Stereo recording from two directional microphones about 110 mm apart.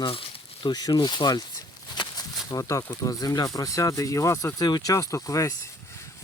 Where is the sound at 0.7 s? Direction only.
40° left (ahead or behind).